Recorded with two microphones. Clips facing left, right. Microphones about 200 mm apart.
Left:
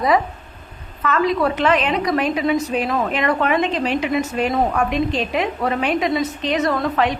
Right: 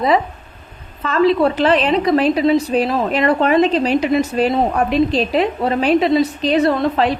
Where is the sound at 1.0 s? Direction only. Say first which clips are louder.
Right 4 dB; 30° right (ahead or behind).